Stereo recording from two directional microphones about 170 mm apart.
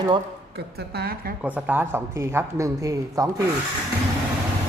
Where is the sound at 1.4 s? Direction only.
10° right (ahead or behind).